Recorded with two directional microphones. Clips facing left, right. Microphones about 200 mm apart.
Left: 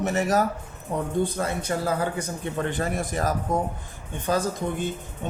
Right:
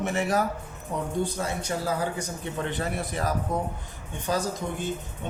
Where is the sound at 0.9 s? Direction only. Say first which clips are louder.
Left 3 dB; 55° left (ahead or behind).